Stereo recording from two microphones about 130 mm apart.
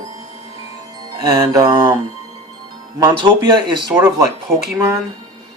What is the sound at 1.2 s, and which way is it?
Speech, 30° right (ahead or behind).